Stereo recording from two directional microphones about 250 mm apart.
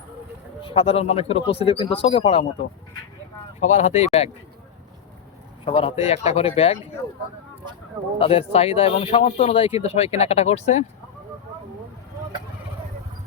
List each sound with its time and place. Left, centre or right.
0.6 s speech: left
3.6 s speech: left
5.6 s speech: left
8.2 s speech: left